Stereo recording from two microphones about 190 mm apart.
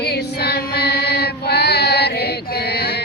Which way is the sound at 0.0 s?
60° left (ahead or behind).